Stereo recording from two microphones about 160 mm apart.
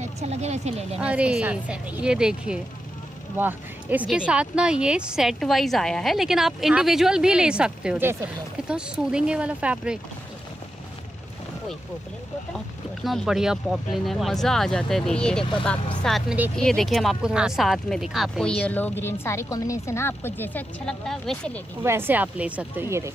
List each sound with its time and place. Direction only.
0.0 s speech: 45° right (ahead or behind)
0.9 s speech: 10° right (ahead or behind)
12.5 s speech: centre (ahead or behind)
18.6 s speech: 10° left (ahead or behind)
21.8 s speech: 15° right (ahead or behind)